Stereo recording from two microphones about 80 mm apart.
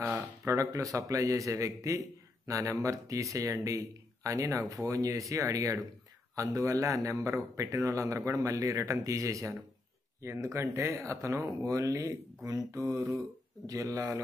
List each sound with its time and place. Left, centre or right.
0.0 s speech: right